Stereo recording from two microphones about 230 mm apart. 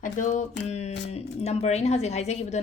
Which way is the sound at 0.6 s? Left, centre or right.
Left.